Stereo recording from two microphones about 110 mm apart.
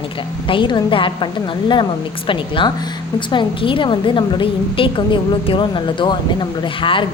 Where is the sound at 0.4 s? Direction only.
50° left (ahead or behind).